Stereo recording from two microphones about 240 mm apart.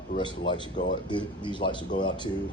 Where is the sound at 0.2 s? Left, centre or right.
Centre.